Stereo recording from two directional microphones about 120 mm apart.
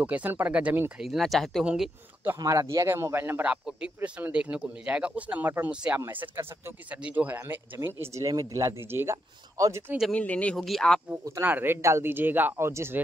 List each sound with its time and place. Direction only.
0.0 s speech: 15° right (ahead or behind)
1.0 s speech: centre (ahead or behind)
2.3 s speech: 30° right (ahead or behind)
10.1 s speech: 10° left (ahead or behind)
11.4 s speech: 15° right (ahead or behind)